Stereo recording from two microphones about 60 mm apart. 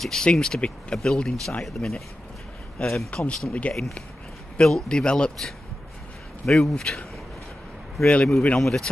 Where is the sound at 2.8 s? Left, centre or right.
Centre.